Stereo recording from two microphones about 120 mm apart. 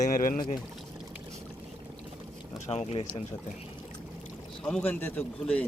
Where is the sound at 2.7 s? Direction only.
60° left (ahead or behind).